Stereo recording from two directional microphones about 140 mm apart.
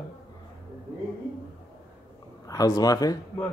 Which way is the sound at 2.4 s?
25° left (ahead or behind).